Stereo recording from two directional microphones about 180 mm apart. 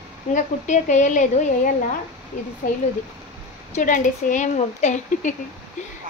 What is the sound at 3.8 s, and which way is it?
Speech, 45° left (ahead or behind).